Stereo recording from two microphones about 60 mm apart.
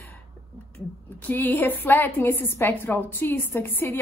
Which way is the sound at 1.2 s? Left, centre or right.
Left.